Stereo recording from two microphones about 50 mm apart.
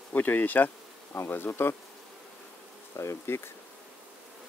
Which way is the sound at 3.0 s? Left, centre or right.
Left.